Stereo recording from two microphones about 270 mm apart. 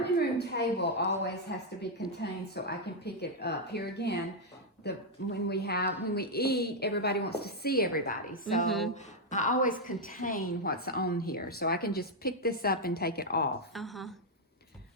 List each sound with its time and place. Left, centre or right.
0.0 s a sound: left
1.2 s a woman's voice: left
13.7 s a woman's voice: centre